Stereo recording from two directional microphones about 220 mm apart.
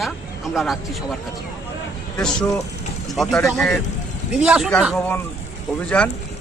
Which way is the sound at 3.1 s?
Centre (ahead or behind).